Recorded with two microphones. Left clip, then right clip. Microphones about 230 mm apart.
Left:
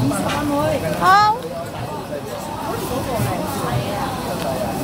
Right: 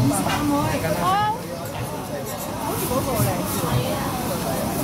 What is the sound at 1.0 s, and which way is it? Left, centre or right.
Speech, left.